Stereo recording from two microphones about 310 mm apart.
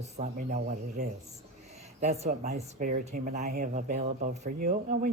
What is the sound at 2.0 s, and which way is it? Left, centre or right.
Speech, right.